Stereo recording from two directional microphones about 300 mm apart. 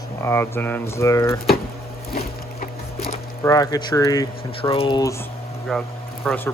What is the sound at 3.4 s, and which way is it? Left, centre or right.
Speech, centre.